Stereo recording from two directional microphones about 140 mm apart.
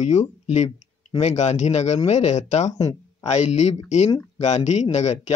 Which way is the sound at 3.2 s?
55° left (ahead or behind).